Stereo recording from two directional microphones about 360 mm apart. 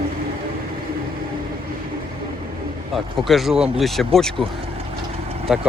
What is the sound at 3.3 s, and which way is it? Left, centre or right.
Speech, centre.